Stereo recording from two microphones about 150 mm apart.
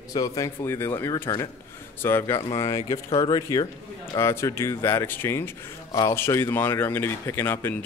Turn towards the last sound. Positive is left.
turn(degrees=15)  # may be behind; listen again after turning